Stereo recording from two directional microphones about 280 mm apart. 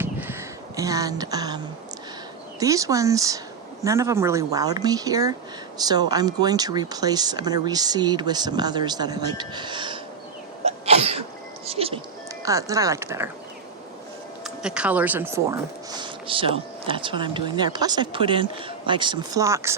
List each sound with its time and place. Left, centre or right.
0.0 s a sound: centre
2.6 s speech: centre
10.7 s sneeze: right
11.6 s music: right
12.5 s speech: centre
14.4 s speech: centre